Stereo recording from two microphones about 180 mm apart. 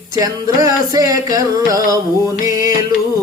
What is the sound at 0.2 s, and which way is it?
Music, 20° right (ahead or behind).